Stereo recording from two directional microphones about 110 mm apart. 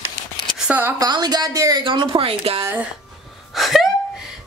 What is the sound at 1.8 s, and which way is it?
Speech, 50° right (ahead or behind).